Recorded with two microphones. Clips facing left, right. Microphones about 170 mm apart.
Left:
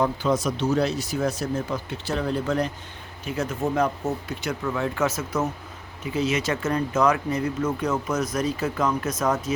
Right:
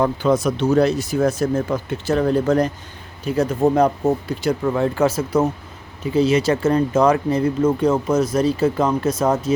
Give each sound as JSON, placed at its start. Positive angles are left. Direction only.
{"t": 0.0, "sound": "speech", "side_deg": -55}